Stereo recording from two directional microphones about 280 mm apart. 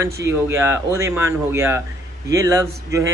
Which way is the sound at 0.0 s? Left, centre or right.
Centre.